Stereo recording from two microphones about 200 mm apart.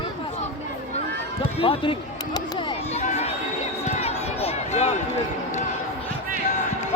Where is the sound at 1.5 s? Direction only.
25° left (ahead or behind).